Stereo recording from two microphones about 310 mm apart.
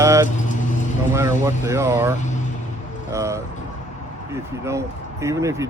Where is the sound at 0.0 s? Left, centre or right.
Centre.